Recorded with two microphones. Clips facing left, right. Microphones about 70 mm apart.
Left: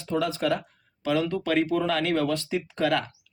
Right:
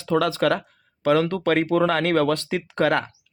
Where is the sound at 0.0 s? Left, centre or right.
Right.